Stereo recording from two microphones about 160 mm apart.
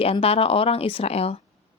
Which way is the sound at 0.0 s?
40° left (ahead or behind).